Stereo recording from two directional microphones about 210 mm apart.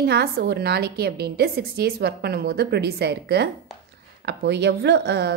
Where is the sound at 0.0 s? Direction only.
50° right (ahead or behind).